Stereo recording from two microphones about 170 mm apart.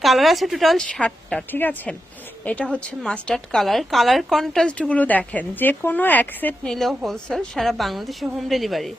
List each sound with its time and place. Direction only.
0.0 s a woman's voice: centre (ahead or behind)